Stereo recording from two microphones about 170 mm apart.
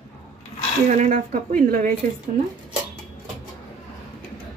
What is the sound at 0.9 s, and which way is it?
A woman's voice, 45° right (ahead or behind).